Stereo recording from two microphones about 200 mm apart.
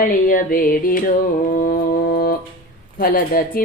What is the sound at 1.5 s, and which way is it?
Music, 45° left (ahead or behind).